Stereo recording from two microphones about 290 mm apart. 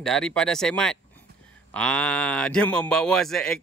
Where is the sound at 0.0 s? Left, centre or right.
Centre.